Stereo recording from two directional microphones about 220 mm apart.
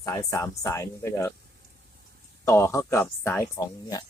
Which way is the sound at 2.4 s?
10° left (ahead or behind).